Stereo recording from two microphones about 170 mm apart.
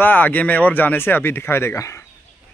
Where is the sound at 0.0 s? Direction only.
10° left (ahead or behind).